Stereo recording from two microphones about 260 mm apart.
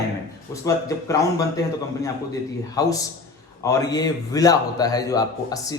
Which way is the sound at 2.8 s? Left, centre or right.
Centre.